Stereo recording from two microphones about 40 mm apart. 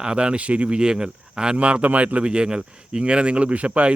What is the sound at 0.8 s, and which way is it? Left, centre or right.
Speech, right.